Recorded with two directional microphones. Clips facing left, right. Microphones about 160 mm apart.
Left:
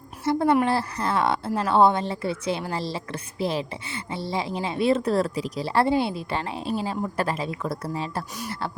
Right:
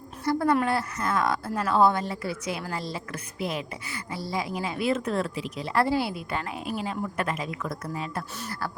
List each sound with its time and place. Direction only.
0.3 s a woman's voice: 25° left (ahead or behind)
8.4 s speech: 15° left (ahead or behind)